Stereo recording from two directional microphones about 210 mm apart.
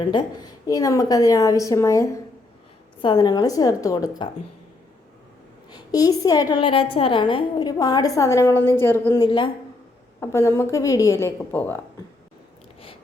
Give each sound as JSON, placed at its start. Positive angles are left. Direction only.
{"t": 0.0, "sound": "a woman's voice", "side_deg": 20}
{"t": 5.7, "sound": "a woman's voice", "side_deg": 15}
{"t": 9.2, "sound": "a woman's voice", "side_deg": 25}